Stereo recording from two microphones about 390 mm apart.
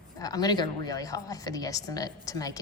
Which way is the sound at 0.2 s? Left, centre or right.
Centre.